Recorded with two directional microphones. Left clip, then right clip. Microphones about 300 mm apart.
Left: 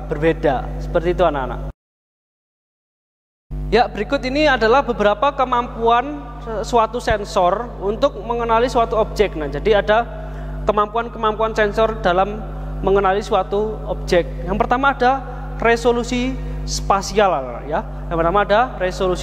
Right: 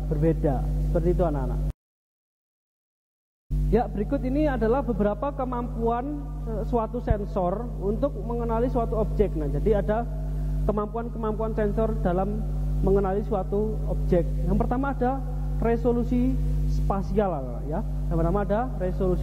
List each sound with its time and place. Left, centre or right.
0.1 s speech: centre
3.7 s a man's voice: centre
13.5 s speech: left
14.0 s speech: centre